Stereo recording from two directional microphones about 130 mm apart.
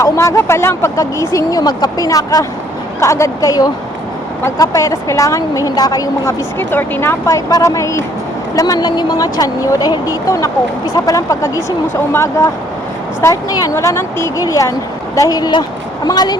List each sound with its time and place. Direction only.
0.0 s speech: 20° left (ahead or behind)
6.6 s speech: 15° left (ahead or behind); by 16.4 s 30° left (ahead or behind)